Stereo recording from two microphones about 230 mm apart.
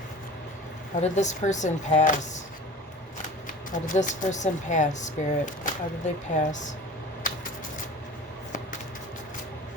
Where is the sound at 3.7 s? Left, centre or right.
Left.